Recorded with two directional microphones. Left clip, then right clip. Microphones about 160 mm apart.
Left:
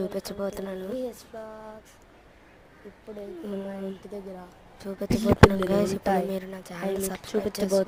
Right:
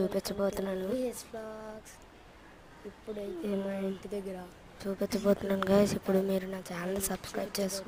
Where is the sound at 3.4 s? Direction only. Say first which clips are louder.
Right 1 dB; centre (ahead or behind).